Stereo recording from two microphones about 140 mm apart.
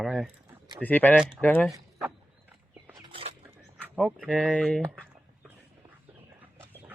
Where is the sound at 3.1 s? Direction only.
45° right (ahead or behind).